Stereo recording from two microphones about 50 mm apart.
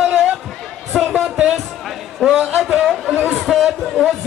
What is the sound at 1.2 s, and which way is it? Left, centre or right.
Speech, centre.